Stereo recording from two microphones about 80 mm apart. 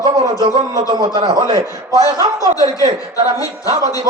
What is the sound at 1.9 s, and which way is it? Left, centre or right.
Speech, left.